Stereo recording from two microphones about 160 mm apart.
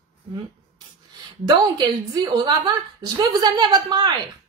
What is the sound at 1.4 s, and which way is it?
A woman's voice, 25° right (ahead or behind).